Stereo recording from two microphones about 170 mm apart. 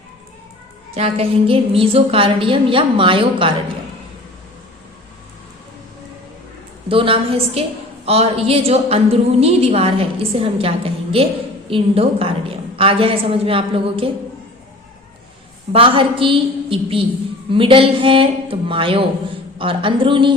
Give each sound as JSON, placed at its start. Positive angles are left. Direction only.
{"t": 0.9, "sound": "a woman's voice", "side_deg": -40}
{"t": 6.8, "sound": "a woman's voice", "side_deg": -30}
{"t": 15.7, "sound": "a woman's voice", "side_deg": -30}